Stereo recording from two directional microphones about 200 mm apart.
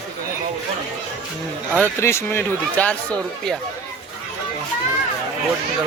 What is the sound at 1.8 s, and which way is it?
Speech, 15° left (ahead or behind).